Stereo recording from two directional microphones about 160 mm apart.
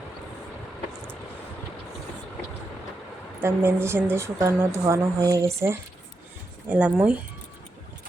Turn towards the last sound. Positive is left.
turn(degrees=-10)  # may be behind; listen again after turning